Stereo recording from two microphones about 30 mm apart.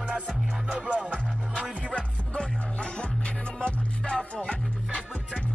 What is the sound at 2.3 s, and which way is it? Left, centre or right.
Music, left.